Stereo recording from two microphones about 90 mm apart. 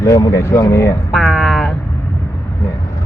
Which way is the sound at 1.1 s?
Centre (ahead or behind).